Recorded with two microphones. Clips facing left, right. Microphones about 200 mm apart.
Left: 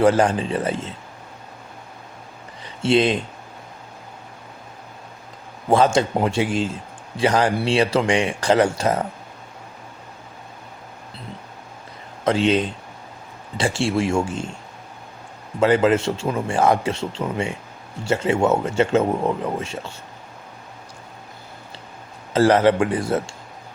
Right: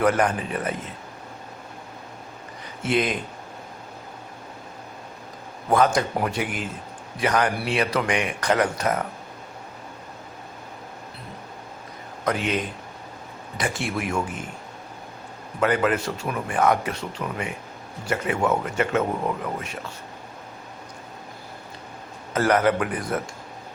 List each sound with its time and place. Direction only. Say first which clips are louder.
0.0 s speech: left 5 dB; 30° left (ahead or behind)
2.8 s speech: left 6 dB; 30° left (ahead or behind)
5.6 s speech: left 3 dB; 25° left (ahead or behind)
12.2 s speech: left 7 dB; 30° left (ahead or behind)
15.6 s speech: left 5 dB; 25° left (ahead or behind)
22.3 s speech: left 5 dB; 30° left (ahead or behind)